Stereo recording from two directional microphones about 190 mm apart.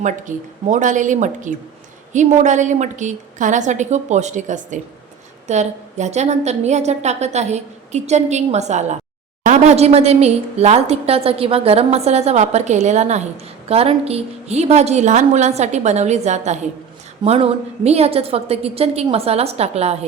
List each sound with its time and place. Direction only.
0.0 s a woman's voice: 40° right (ahead or behind)